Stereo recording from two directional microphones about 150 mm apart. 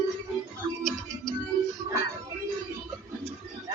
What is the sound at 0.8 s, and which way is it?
Music, 5° left (ahead or behind).